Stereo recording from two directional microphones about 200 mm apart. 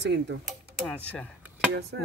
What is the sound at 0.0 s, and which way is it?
Speech, 60° right (ahead or behind).